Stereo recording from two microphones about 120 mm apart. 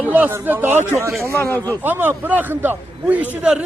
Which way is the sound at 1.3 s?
20° left (ahead or behind).